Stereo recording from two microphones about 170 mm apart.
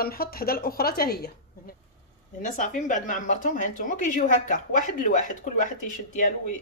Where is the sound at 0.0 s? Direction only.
60° left (ahead or behind).